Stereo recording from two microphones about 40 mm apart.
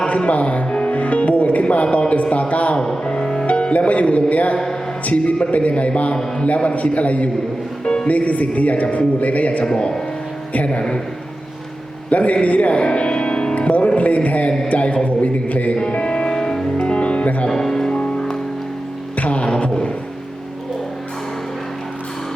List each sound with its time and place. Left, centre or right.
0.3 s a man's voice: left
2.7 s music: centre
3.4 s music: left
5.0 s a man's voice: left
9.6 s a man's voice: left
10.5 s a man's voice: left
12.1 s speech: left
13.6 s music: left
14.7 s a man's voice: left
15.9 s music: left
17.5 s music: centre
17.9 s music: left
19.1 s music: left